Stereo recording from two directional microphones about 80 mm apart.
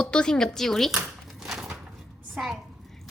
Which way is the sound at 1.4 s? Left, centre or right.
Centre.